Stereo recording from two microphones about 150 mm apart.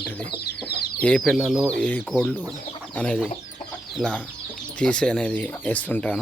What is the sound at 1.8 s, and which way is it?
Speech, 10° left (ahead or behind).